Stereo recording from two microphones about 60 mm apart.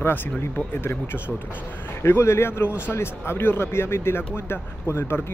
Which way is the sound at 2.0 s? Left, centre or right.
Left.